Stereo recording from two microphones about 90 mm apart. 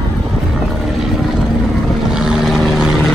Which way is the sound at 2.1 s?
5° right (ahead or behind).